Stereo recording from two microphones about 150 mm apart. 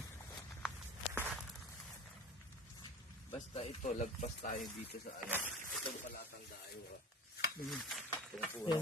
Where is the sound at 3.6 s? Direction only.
50° left (ahead or behind).